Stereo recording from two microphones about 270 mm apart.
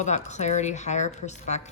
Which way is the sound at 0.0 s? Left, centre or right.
Left.